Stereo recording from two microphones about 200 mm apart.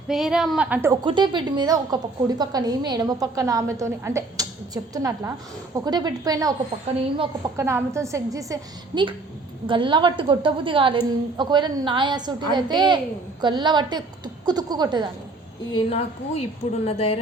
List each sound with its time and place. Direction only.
0.1 s a woman's voice: centre (ahead or behind)
1.0 s a woman's voice: 25° right (ahead or behind)
9.6 s a woman's voice: 25° right (ahead or behind)
15.9 s a woman's voice: 30° left (ahead or behind)